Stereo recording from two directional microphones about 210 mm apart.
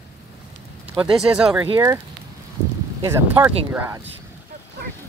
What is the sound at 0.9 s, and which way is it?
Speech, 5° right (ahead or behind).